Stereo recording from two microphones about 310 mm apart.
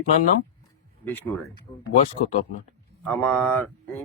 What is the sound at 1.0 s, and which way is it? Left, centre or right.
Speech, centre.